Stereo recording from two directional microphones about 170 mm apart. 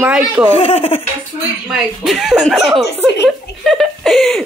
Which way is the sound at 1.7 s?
Centre (ahead or behind).